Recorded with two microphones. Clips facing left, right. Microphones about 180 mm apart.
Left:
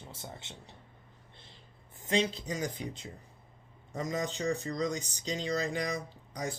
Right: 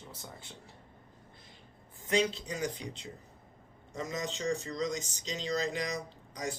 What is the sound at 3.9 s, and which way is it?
Speech, 35° left (ahead or behind).